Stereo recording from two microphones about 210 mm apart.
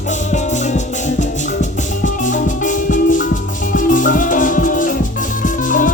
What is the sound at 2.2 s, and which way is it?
Music, 40° left (ahead or behind).